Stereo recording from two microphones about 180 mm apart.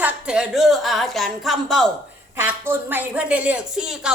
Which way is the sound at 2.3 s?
10° right (ahead or behind).